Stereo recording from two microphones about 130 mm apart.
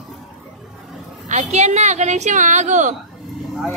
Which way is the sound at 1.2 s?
65° right (ahead or behind).